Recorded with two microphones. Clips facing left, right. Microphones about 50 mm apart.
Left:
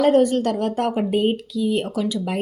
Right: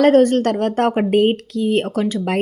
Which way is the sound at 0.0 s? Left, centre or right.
Right.